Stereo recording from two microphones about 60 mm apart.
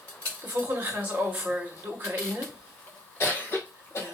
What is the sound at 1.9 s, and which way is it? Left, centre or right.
Speech, right.